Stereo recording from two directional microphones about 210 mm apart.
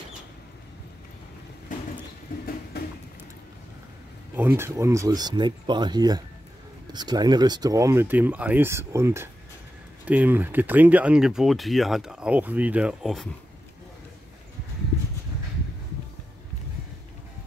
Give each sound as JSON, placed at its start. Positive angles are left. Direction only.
{"t": 1.7, "sound": "vehicle", "side_deg": 40}
{"t": 4.4, "sound": "speech", "side_deg": -10}